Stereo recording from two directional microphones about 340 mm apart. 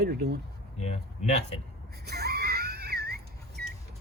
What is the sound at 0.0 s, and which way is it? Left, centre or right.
Speech, right.